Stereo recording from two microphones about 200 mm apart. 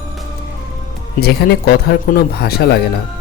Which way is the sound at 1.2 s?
50° left (ahead or behind).